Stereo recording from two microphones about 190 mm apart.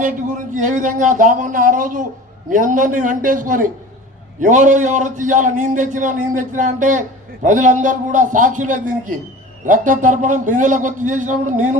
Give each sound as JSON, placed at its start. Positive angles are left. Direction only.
{"t": 0.5, "sound": "a man's voice", "side_deg": -45}